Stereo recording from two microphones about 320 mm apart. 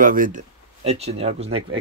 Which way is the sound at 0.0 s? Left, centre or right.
Right.